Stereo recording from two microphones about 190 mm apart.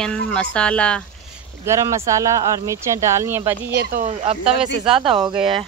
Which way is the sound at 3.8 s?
45° right (ahead or behind).